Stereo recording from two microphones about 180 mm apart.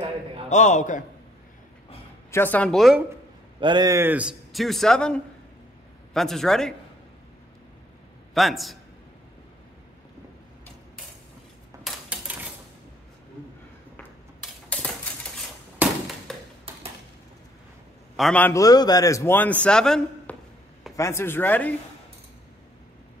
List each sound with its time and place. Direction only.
0.5 s a man's voice: 40° left (ahead or behind)
2.3 s a man's voice: 10° left (ahead or behind)
3.6 s a man's voice: 20° right (ahead or behind); by 6.7 s centre (ahead or behind)
8.4 s a man's voice: centre (ahead or behind)
11.8 s dishes: 10° right (ahead or behind)
14.4 s a sound: 5° left (ahead or behind)
15.8 s a sound: 10° right (ahead or behind)
16.3 s a sound: centre (ahead or behind)
18.1 s a man's voice: 5° left (ahead or behind)
20.9 s a man's voice: 15° left (ahead or behind)